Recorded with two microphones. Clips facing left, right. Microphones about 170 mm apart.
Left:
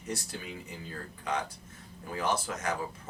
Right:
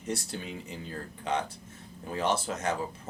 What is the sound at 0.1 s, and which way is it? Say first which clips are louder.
Speech: right 3 dB; 25° right (ahead or behind).